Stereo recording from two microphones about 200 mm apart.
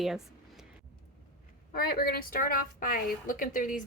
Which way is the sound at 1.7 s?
50° left (ahead or behind).